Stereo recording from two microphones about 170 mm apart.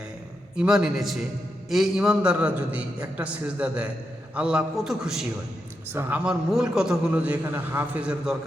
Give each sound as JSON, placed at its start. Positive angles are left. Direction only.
{"t": 0.5, "sound": "a man's voice", "side_deg": -5}